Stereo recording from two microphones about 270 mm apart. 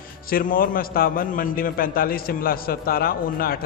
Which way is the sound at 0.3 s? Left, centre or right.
Left.